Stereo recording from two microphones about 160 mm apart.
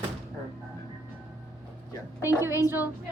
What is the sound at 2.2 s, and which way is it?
Speech, 15° right (ahead or behind).